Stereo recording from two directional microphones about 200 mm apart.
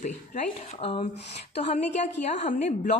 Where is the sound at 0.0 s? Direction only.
35° left (ahead or behind).